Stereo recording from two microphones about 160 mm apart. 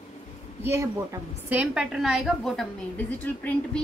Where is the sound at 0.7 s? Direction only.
15° right (ahead or behind).